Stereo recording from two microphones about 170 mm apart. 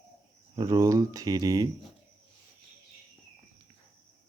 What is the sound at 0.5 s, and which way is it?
Speech, 20° right (ahead or behind).